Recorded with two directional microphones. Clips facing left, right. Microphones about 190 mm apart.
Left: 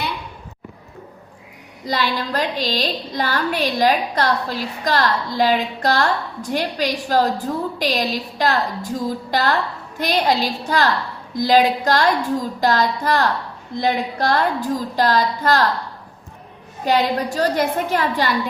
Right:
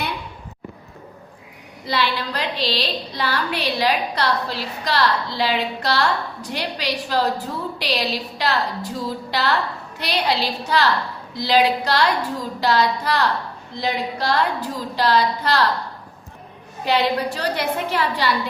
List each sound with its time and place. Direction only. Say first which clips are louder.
1.9 s a woman's voice: left 1 dB; 45° left (ahead or behind)
16.8 s a woman's voice: left 1 dB; 45° left (ahead or behind)